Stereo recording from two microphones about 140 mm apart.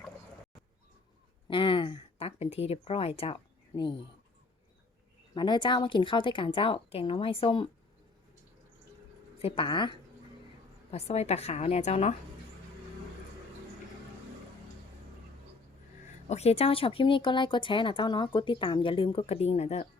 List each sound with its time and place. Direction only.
1.5 s a sound: 35° left (ahead or behind)
3.8 s speech: 35° left (ahead or behind)
5.3 s speech: 35° left (ahead or behind)
9.4 s speech: 40° left (ahead or behind)
10.9 s a woman's voice: 50° left (ahead or behind)
16.3 s speech: 50° left (ahead or behind)